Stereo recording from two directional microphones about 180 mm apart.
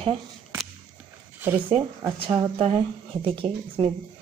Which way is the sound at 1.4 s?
10° right (ahead or behind).